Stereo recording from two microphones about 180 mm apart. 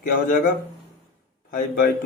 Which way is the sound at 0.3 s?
50° left (ahead or behind).